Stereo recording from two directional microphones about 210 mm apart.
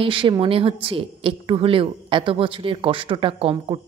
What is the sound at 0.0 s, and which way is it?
Speech, 25° right (ahead or behind).